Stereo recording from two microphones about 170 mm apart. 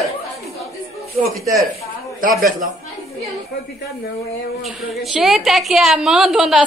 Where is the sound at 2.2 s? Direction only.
55° right (ahead or behind).